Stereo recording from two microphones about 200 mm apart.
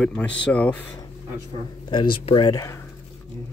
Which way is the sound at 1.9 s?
25° left (ahead or behind).